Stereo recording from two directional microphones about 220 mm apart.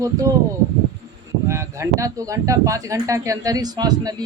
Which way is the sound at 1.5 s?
15° right (ahead or behind).